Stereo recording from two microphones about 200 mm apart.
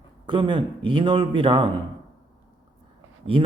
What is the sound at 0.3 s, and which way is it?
Speech, 25° right (ahead or behind).